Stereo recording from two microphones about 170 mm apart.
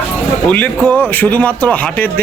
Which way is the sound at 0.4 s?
10° left (ahead or behind).